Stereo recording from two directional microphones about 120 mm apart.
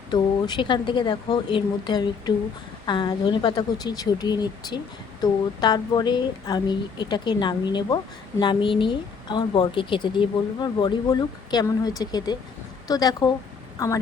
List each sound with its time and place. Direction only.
0.1 s speech: 40° left (ahead or behind)